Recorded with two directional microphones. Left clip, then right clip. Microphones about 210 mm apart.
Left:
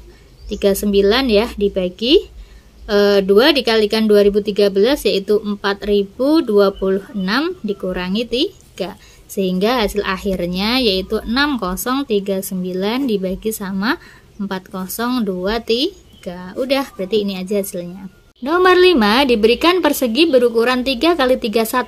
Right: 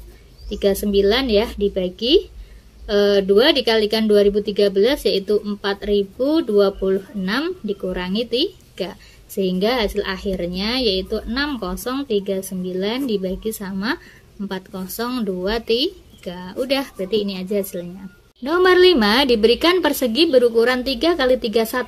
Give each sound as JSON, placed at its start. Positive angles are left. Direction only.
{"t": 0.5, "sound": "speech", "side_deg": 15}